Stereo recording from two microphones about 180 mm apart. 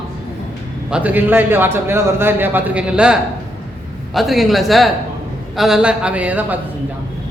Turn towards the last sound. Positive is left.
turn(degrees=-10)  # may be behind; listen again after turning